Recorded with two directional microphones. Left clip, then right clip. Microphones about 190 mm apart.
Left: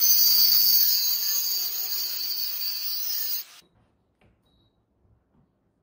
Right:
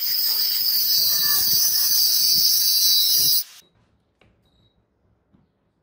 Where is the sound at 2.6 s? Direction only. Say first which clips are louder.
Right 12 dB; 15° left (ahead or behind).